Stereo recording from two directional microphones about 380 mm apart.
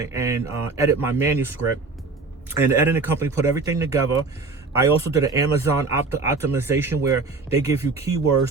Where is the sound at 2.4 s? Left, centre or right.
Centre.